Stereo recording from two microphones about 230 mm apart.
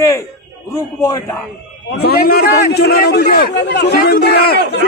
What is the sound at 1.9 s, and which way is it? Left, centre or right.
A man's voice, left.